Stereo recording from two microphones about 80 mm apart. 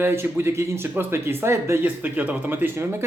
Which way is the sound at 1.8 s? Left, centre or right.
Right.